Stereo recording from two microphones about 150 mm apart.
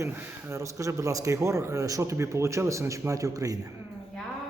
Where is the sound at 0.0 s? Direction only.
15° right (ahead or behind).